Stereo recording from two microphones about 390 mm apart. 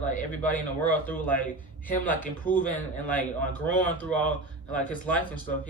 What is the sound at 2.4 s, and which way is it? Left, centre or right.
Speech, centre.